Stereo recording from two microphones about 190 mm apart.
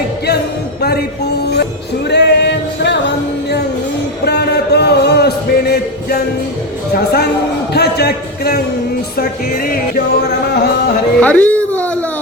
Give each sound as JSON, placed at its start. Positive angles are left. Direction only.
{"t": 0.8, "sound": "music", "side_deg": 55}
{"t": 2.0, "sound": "singing", "side_deg": 65}
{"t": 4.3, "sound": "a sound", "side_deg": 60}
{"t": 6.9, "sound": "a man's voice", "side_deg": 55}
{"t": 9.1, "sound": "music", "side_deg": 55}
{"t": 11.2, "sound": "a sound", "side_deg": 10}